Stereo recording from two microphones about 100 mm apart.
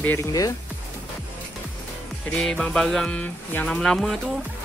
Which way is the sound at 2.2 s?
10° left (ahead or behind).